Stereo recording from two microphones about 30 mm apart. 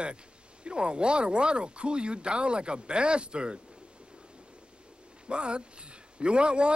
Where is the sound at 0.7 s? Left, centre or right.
Right.